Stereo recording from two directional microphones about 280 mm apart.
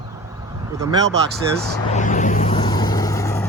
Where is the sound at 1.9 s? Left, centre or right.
Left; by 3.4 s centre.